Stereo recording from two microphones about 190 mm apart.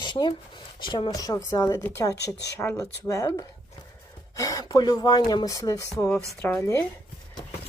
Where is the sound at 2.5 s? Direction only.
15° left (ahead or behind).